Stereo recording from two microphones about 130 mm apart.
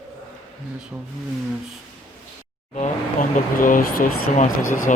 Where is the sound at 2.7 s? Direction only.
75° left (ahead or behind).